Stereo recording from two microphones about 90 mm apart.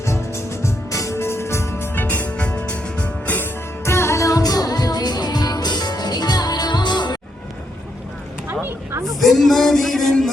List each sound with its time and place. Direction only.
0.0 s music: 30° left (ahead or behind)
3.8 s music: 30° left (ahead or behind); by 7.2 s 55° left (ahead or behind)
8.4 s a sound: 25° right (ahead or behind)
9.2 s music: centre (ahead or behind)